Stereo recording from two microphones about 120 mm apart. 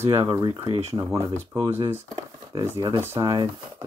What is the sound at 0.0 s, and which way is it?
Speech, 25° right (ahead or behind).